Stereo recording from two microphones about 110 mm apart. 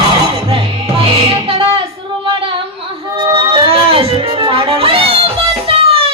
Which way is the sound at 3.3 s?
55° right (ahead or behind).